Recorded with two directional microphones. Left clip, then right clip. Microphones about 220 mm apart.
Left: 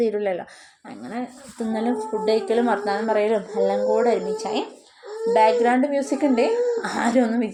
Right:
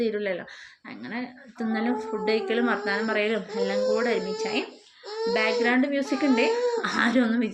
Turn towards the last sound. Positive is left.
turn(degrees=10)  # may be behind; listen again after turning